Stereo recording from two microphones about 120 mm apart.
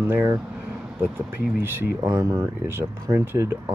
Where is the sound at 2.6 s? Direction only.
20° right (ahead or behind).